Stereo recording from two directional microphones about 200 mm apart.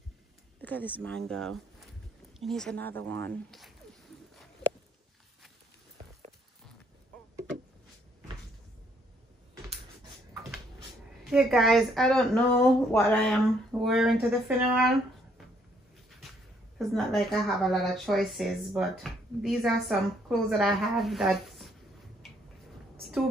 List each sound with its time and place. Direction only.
0.6 s speech: 10° left (ahead or behind)
11.2 s speech: centre (ahead or behind)
16.7 s speech: centre (ahead or behind)